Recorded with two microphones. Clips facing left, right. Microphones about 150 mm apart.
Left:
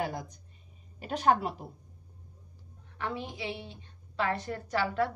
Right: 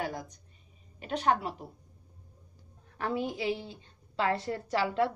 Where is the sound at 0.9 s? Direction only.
35° left (ahead or behind).